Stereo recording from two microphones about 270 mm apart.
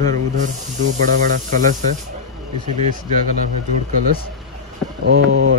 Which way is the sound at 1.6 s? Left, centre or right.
Right.